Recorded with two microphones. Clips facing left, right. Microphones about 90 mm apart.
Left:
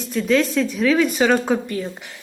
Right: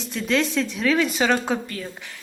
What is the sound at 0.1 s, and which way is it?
A woman's voice, centre (ahead or behind).